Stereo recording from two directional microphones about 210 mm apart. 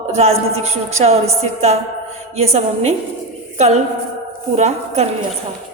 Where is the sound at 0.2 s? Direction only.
30° right (ahead or behind).